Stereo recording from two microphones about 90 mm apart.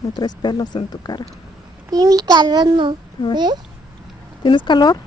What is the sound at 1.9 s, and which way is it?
A child's voice, 45° right (ahead or behind).